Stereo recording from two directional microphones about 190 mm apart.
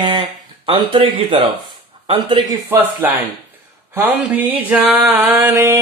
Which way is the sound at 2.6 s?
10° right (ahead or behind).